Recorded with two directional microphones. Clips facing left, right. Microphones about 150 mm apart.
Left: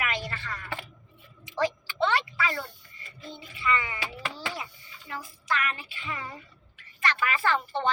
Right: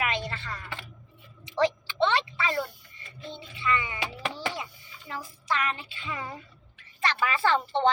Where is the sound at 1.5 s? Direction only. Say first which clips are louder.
Right 3 dB; 25° right (ahead or behind).